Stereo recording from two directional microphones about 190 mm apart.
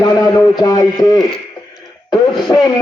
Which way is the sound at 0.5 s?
20° left (ahead or behind).